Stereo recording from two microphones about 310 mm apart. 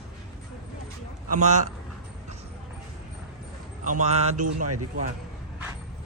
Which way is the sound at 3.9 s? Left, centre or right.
Right.